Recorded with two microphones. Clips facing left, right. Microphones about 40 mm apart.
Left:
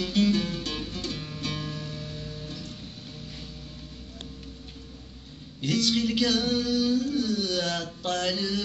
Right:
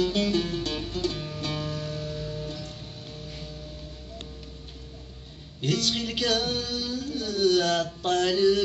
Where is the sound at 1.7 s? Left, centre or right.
Right.